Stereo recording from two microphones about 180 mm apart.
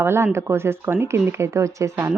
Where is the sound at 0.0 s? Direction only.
15° right (ahead or behind).